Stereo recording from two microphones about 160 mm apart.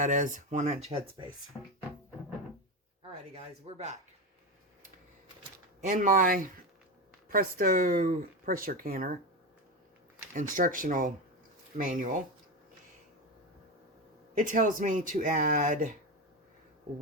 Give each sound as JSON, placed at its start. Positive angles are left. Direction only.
{"t": 0.0, "sound": "speech", "side_deg": -55}
{"t": 1.5, "sound": "speech", "side_deg": 10}
{"t": 3.3, "sound": "speech", "side_deg": -40}
{"t": 5.8, "sound": "speech", "side_deg": -55}
{"t": 10.3, "sound": "speech", "side_deg": -55}
{"t": 14.3, "sound": "speech", "side_deg": -55}